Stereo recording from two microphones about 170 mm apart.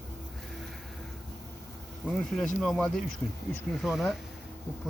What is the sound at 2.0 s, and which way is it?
Speech, 5° left (ahead or behind).